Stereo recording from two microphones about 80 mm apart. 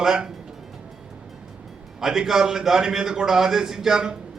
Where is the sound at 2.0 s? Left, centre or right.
Centre.